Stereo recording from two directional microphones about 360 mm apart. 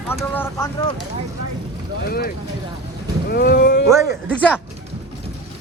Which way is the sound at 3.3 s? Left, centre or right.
Left.